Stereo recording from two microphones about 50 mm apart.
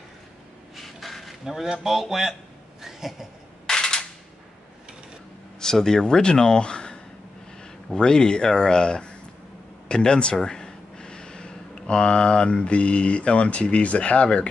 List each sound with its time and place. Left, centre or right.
0.7 s a sound: centre
3.6 s cap gun: centre
5.6 s speech: centre